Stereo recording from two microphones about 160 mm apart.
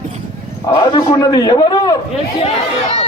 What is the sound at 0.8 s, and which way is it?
A man's voice, 25° left (ahead or behind).